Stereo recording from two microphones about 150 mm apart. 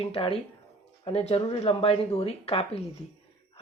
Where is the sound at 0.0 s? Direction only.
40° left (ahead or behind).